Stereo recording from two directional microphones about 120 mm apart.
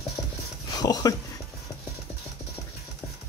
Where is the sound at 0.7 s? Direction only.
35° left (ahead or behind).